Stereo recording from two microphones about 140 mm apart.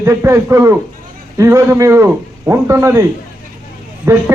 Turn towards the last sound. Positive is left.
turn(degrees=-20)  # may be behind; listen again after turning